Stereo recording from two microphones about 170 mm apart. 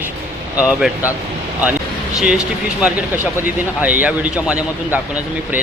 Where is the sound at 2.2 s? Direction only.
5° right (ahead or behind).